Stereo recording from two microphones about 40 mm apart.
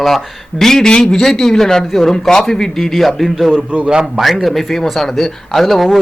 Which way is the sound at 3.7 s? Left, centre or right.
Right.